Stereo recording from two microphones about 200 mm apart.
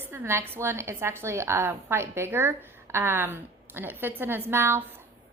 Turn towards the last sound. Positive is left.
turn(degrees=-10)  # may be behind; listen again after turning